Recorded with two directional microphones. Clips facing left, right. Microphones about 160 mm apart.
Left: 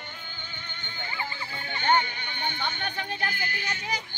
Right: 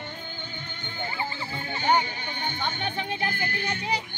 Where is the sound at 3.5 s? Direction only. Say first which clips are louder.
Right 4 dB; 55° right (ahead or behind).